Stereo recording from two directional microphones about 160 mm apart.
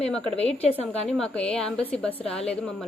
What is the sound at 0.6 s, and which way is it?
Speech, 40° left (ahead or behind).